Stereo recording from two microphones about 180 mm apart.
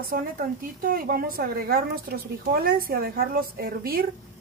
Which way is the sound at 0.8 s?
55° right (ahead or behind).